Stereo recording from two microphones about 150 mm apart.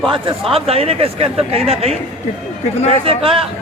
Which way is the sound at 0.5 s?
40° right (ahead or behind).